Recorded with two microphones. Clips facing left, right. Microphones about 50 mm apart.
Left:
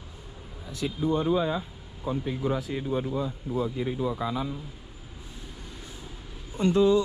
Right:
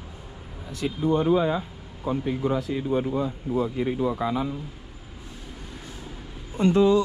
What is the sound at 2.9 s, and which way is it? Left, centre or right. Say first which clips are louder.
Speech: right 4 dB; right.